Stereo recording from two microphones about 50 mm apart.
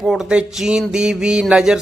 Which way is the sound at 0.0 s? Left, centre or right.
Centre.